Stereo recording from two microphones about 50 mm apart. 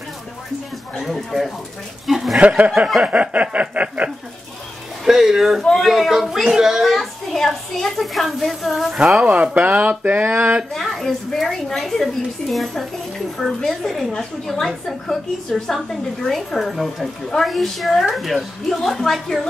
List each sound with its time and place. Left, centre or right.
0.9 s a woman's voice: centre
2.3 s speech: right
5.0 s speech: centre
5.6 s a woman's voice: centre
7.3 s a woman's voice: centre
8.9 s a child's voice: centre
9.2 s speech: right
10.7 s a woman's voice: centre